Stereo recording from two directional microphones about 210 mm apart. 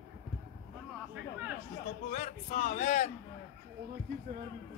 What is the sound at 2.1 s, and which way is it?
Speech, 35° left (ahead or behind).